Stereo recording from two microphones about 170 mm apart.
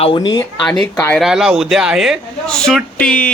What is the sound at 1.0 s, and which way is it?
Speech, 10° left (ahead or behind).